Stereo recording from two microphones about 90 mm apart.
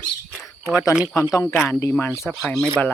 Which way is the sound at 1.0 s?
10° right (ahead or behind).